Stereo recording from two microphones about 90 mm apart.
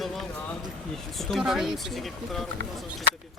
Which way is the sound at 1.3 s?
5° right (ahead or behind).